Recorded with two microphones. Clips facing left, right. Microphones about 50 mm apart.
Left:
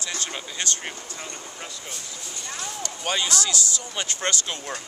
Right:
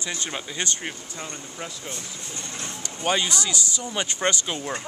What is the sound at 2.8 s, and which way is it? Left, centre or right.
Speech, centre.